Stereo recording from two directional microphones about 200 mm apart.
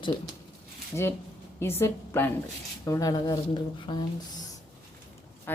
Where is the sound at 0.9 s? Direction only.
10° left (ahead or behind).